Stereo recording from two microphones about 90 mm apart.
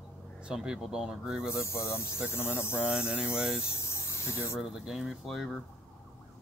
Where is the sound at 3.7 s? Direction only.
30° left (ahead or behind).